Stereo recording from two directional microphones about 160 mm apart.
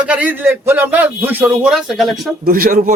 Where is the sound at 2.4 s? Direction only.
60° right (ahead or behind).